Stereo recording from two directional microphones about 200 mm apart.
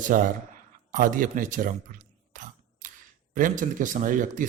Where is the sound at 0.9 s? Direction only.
40° right (ahead or behind).